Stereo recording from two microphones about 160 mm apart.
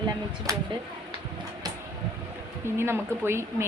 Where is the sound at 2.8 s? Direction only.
15° right (ahead or behind).